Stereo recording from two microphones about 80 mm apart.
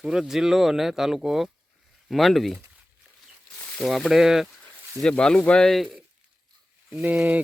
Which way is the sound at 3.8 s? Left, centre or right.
Centre.